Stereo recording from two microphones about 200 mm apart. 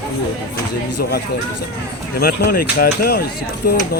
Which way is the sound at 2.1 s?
50° left (ahead or behind).